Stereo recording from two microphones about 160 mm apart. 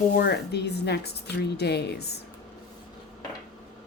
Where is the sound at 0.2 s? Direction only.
85° left.